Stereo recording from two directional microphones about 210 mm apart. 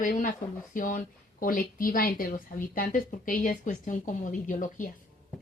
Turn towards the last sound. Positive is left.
turn(degrees=40)  # may be behind; listen again after turning